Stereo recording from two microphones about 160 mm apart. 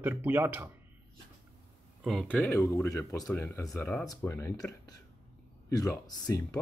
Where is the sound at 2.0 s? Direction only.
Centre (ahead or behind).